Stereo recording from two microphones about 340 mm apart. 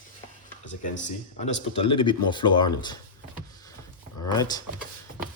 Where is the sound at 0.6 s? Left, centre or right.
Left; by 3.0 s centre.